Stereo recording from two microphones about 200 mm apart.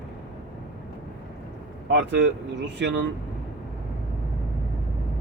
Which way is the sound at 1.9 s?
60° right (ahead or behind).